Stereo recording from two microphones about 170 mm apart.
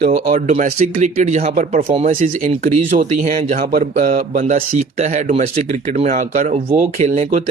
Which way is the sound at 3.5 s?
60° right (ahead or behind).